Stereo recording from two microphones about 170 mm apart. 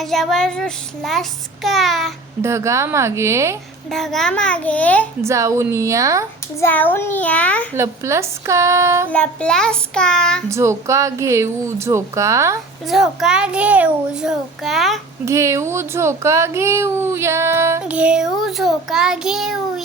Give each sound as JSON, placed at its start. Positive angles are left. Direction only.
{"t": 0.0, "sound": "a child's voice", "side_deg": 0}
{"t": 2.4, "sound": "speech", "side_deg": -15}
{"t": 3.9, "sound": "a child's voice", "side_deg": 0}
{"t": 5.2, "sound": "speech", "side_deg": -15}
{"t": 6.6, "sound": "a child's voice", "side_deg": 10}
{"t": 7.8, "sound": "speech", "side_deg": -15}
{"t": 9.1, "sound": "a child's voice", "side_deg": 5}
{"t": 10.5, "sound": "speech", "side_deg": -15}
{"t": 12.9, "sound": "a child's voice", "side_deg": 0}
{"t": 15.2, "sound": "speech", "side_deg": -15}